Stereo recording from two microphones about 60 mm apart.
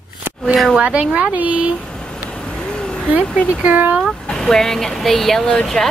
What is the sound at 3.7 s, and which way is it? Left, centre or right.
Speech, right.